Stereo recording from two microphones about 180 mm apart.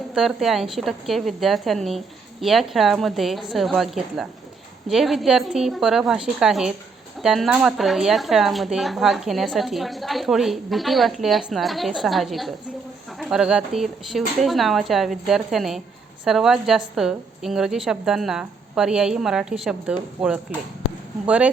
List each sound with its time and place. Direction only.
0.1 s speech: centre (ahead or behind)